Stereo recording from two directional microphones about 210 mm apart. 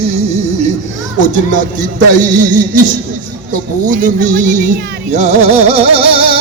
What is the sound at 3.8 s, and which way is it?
Speech, 40° right (ahead or behind).